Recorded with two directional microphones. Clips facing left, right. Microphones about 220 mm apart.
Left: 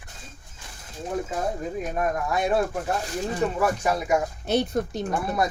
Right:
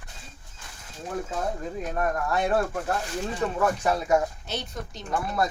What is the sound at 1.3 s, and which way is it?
Speech, 15° left (ahead or behind).